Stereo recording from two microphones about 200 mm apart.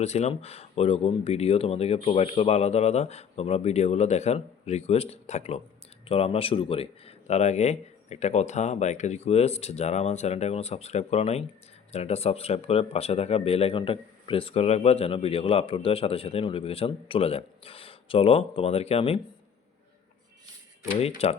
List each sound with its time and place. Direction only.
0.0 s speech: 30° left (ahead or behind)
21.2 s speech: 30° left (ahead or behind)